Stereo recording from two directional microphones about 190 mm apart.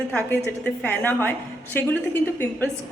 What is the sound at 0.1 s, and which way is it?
A woman's voice, 10° left (ahead or behind).